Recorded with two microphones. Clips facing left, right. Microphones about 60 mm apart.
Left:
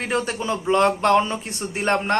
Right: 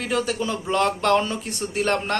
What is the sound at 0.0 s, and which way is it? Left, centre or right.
A man's voice, left.